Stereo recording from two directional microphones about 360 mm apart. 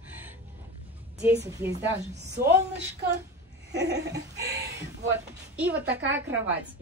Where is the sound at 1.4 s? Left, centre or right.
Centre.